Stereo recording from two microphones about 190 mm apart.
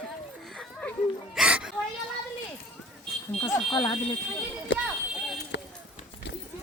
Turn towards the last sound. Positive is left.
turn(degrees=65)  # may be behind; listen again after turning